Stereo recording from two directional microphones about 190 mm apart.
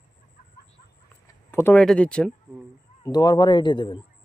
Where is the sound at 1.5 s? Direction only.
10° left (ahead or behind).